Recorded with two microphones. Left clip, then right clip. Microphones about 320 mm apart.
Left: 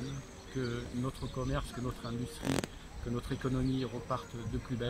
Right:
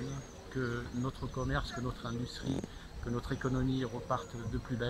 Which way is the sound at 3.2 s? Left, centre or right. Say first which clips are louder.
Even; centre.